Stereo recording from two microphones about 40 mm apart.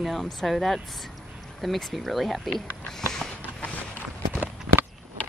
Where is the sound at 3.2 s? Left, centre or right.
Centre.